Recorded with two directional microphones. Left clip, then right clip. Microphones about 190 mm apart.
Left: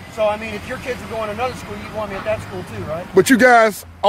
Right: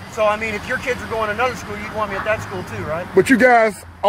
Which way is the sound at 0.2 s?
10° right (ahead or behind).